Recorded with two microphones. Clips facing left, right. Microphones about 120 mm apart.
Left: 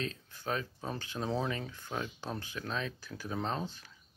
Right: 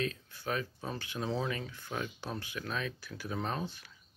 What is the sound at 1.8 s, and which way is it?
Speech, 20° left (ahead or behind).